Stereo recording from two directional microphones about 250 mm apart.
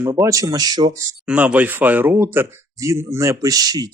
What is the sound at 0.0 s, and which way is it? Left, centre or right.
Speech, centre.